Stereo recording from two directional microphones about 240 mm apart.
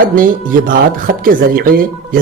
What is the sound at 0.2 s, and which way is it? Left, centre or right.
Speech, right.